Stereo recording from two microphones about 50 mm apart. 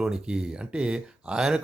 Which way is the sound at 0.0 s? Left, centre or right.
Centre.